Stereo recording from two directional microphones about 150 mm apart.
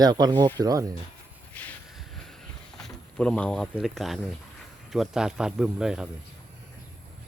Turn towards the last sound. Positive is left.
turn(degrees=-5)  # may be behind; listen again after turning